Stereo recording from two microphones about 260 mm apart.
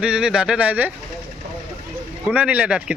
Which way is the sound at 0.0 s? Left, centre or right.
Centre.